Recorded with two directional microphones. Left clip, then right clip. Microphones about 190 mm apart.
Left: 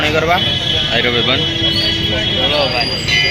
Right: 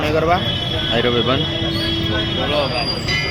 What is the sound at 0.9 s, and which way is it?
Speech, 25° right (ahead or behind).